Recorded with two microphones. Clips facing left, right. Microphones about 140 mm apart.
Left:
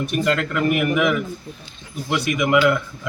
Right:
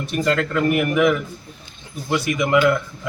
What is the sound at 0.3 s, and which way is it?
A man's voice, 15° left (ahead or behind).